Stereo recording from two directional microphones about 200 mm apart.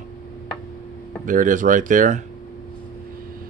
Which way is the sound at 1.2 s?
40° right (ahead or behind).